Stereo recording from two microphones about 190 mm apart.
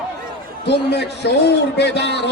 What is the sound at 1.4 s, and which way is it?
Speech, 65° left (ahead or behind).